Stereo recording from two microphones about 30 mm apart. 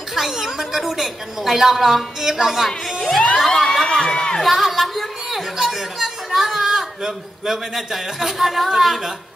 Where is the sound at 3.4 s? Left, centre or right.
Centre.